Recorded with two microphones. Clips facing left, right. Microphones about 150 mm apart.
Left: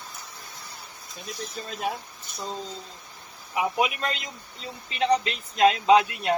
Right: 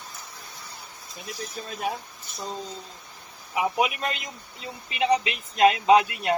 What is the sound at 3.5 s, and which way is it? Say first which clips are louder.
Speech: right 1 dB; centre (ahead or behind).